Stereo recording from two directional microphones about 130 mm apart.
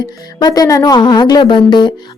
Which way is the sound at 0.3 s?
30° left (ahead or behind).